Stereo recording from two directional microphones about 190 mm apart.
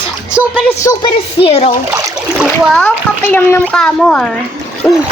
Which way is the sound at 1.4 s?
30° left (ahead or behind).